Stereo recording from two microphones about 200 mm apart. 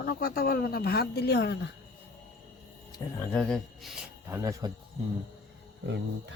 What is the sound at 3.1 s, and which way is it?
Speech, 10° left (ahead or behind).